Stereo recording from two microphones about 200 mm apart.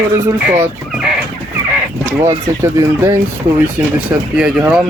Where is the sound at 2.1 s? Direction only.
15° right (ahead or behind).